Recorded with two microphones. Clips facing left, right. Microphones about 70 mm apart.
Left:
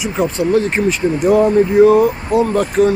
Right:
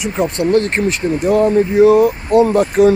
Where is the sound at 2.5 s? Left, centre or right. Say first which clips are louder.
Right 2 dB; right.